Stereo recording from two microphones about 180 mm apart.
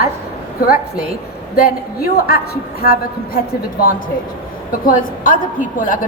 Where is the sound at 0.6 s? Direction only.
55° left (ahead or behind).